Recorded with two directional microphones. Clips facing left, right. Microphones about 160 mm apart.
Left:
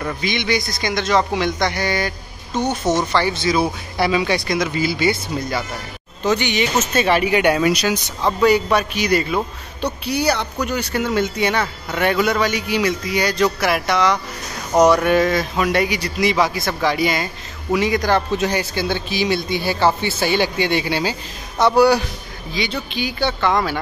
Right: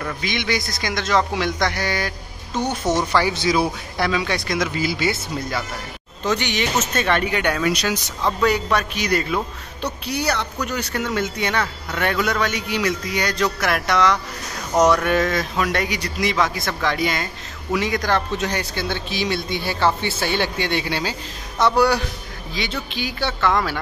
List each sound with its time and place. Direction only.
0.0 s a man's voice: centre (ahead or behind)
4.0 s a man's voice: 5° left (ahead or behind)